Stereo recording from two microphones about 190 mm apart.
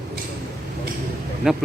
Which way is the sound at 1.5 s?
5° right (ahead or behind).